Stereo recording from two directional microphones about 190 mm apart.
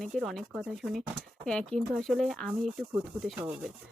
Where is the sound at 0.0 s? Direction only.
Centre (ahead or behind).